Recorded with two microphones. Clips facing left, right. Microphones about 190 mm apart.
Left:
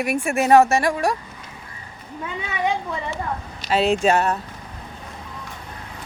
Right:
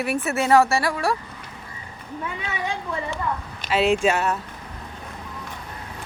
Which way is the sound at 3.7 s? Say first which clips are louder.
Left 1 dB; 40° left (ahead or behind).